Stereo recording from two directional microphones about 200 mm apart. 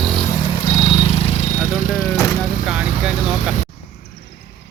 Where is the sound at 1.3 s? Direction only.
35° left (ahead or behind).